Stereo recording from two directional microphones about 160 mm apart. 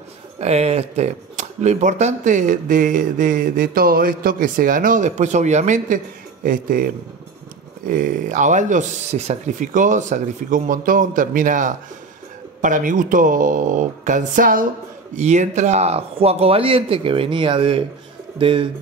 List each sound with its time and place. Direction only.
0.4 s speech: 40° right (ahead or behind)
6.4 s speech: 60° right (ahead or behind)
15.1 s speech: 45° right (ahead or behind)